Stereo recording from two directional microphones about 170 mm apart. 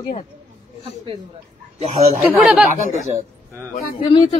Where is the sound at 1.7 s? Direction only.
35° right (ahead or behind).